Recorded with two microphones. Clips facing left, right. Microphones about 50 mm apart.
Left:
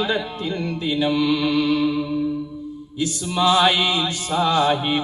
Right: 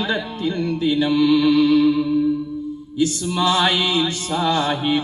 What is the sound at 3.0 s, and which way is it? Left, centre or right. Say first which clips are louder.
Mantra: right 2 dB; centre.